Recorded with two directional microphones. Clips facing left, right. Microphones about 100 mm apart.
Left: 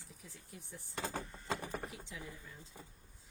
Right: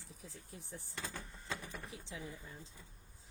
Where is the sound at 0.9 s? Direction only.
50° left (ahead or behind).